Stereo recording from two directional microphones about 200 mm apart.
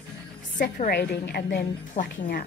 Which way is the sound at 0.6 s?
40° left (ahead or behind).